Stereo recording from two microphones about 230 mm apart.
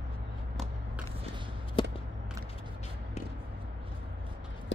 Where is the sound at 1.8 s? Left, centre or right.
Left.